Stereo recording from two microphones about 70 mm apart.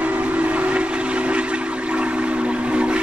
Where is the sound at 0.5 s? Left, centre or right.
Centre.